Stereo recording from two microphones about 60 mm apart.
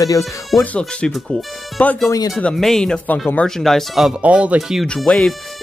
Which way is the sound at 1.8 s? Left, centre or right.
Left.